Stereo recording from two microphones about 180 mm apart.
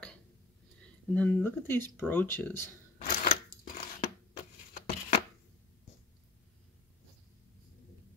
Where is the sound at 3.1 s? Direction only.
55° left (ahead or behind).